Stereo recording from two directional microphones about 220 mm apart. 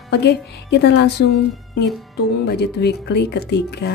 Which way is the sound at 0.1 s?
50° left (ahead or behind).